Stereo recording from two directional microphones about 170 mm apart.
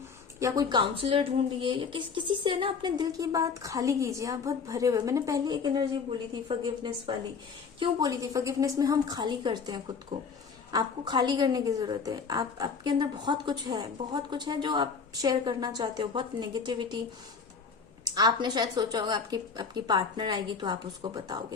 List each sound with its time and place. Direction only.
0.3 s a woman's voice: 20° right (ahead or behind)
18.0 s a woman's voice: 25° right (ahead or behind)